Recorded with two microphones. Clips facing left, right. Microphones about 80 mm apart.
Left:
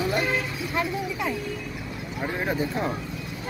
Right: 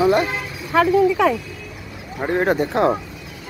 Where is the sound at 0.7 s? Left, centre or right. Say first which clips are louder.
Right 16 dB; right.